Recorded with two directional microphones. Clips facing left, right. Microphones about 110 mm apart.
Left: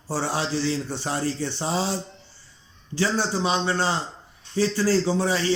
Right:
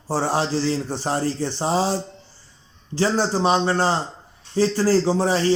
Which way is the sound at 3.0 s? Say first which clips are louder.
Right 4 dB; 45° right (ahead or behind).